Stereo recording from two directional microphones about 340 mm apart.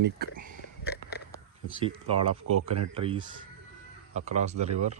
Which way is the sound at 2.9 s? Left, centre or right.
Centre.